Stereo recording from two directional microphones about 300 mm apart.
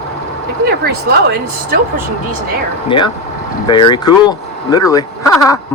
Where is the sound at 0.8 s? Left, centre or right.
Right.